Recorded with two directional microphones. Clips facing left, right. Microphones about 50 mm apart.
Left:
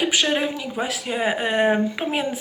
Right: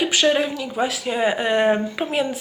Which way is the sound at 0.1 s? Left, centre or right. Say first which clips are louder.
Right 3 dB; centre.